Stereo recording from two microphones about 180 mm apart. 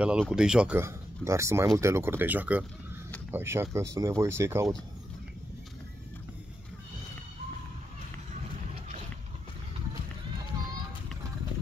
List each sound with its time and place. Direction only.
0.0 s speech: 5° right (ahead or behind)